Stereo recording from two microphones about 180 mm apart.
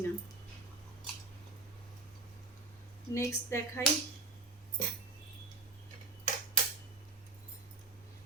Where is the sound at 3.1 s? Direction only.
15° left (ahead or behind).